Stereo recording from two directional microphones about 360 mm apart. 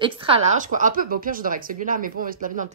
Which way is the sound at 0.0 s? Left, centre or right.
Centre.